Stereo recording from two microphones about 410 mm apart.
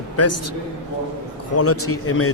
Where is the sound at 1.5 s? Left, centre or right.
Left.